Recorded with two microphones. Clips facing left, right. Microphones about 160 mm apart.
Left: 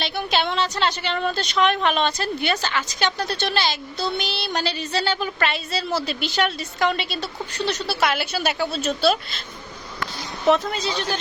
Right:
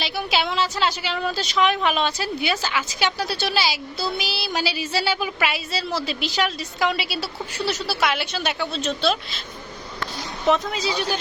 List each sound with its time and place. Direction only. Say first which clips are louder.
0.0 s a woman's voice: left 1 dB; 5° right (ahead or behind)
10.4 s a woman's voice: left 2 dB; centre (ahead or behind)